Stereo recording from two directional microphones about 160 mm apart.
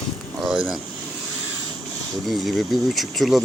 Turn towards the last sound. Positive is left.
turn(degrees=0)  # may be behind; listen again after turning